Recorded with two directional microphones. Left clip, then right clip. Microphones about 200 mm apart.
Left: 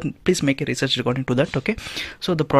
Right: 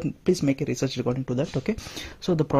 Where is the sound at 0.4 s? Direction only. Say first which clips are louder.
Left 4 dB; 5° left (ahead or behind).